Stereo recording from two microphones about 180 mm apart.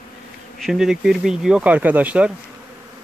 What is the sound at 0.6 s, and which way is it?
Speech, centre (ahead or behind).